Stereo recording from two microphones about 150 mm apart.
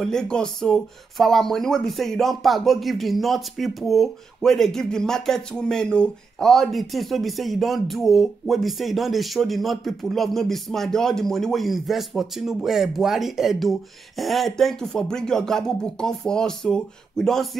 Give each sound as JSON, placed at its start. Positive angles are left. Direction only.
{"t": 0.0, "sound": "speech", "side_deg": 5}